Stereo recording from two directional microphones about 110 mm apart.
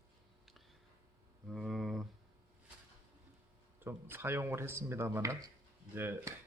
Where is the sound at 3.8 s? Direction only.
20° right (ahead or behind).